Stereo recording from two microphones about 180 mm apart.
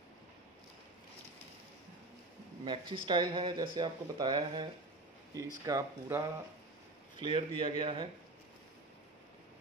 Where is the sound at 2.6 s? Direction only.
25° right (ahead or behind).